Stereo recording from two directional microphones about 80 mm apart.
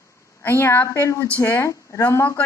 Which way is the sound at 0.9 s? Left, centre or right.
Left.